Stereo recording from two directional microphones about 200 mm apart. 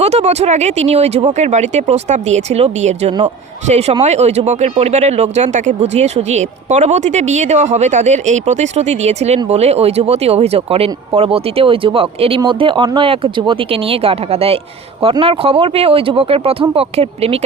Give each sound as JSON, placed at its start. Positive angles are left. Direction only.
{"t": 0.0, "sound": "speech", "side_deg": -30}